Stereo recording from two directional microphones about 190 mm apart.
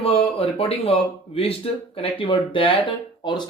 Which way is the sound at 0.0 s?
30° left (ahead or behind).